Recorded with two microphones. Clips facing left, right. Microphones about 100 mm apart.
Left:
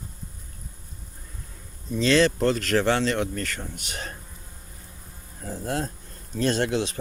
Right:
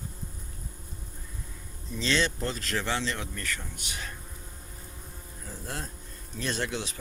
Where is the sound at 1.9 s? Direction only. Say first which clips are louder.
Left 8 dB; 50° left (ahead or behind).